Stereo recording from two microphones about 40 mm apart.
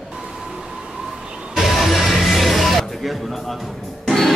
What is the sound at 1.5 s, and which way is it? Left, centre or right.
Music, centre.